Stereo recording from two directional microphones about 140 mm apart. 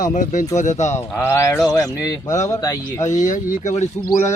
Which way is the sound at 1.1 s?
15° left (ahead or behind).